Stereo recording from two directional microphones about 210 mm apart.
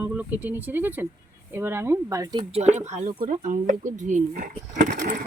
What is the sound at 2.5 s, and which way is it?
Speech, 30° right (ahead or behind).